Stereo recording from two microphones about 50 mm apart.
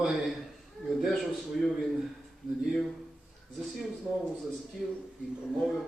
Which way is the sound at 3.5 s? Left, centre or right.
Centre.